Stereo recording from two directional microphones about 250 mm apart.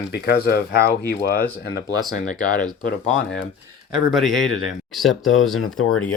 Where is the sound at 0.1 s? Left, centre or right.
Left.